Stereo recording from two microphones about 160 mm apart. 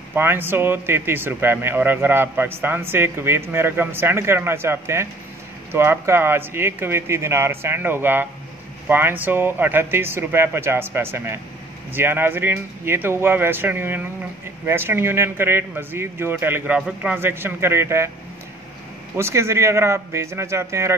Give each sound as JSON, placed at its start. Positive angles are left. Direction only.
{"t": 0.1, "sound": "speech", "side_deg": -15}
{"t": 19.1, "sound": "speech", "side_deg": -15}